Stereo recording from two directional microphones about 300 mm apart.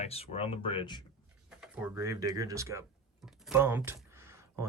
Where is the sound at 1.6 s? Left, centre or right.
Centre.